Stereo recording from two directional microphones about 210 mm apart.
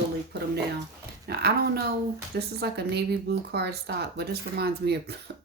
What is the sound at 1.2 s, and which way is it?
Speech, 50° right (ahead or behind).